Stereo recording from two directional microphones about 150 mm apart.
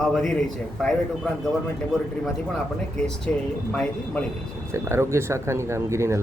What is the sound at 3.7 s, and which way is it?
Speech, 5° left (ahead or behind).